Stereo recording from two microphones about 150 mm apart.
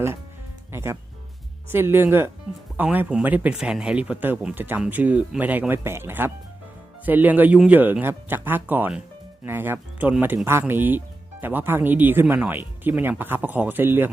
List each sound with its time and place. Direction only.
0.7 s speech: 15° right (ahead or behind)